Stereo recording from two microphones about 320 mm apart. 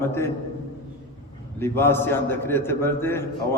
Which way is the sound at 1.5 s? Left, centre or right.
Centre.